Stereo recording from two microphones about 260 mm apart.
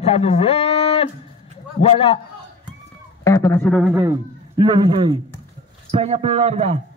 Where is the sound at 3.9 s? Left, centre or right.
Centre.